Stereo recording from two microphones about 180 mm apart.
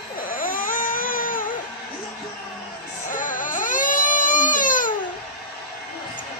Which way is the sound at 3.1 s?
45° left (ahead or behind).